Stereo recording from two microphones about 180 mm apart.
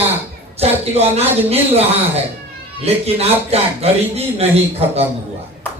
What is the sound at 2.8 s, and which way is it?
Speech, 35° right (ahead or behind).